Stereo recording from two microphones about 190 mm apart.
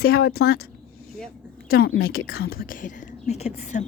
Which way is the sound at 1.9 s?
90° left.